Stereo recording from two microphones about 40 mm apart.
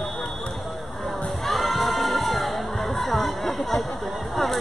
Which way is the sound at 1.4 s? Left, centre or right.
Centre.